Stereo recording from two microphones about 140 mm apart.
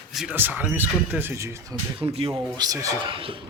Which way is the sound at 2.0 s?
45° right (ahead or behind).